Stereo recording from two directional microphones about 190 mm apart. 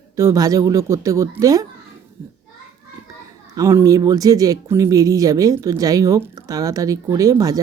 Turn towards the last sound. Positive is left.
turn(degrees=-20)  # may be behind; listen again after turning